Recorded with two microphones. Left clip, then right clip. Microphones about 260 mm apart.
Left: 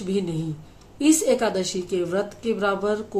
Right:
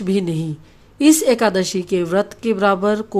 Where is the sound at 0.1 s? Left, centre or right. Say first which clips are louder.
Right 5 dB; right.